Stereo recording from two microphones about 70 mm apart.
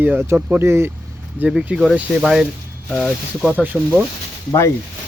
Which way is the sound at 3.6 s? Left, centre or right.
Right.